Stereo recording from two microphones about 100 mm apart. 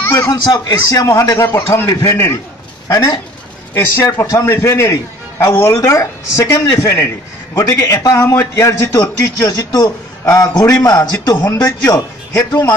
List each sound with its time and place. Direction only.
0.0 s a sound: 25° left (ahead or behind)
0.3 s a man's voice: 40° left (ahead or behind)
1.5 s a man's voice: 25° left (ahead or behind)
3.7 s a man's voice: 25° left (ahead or behind)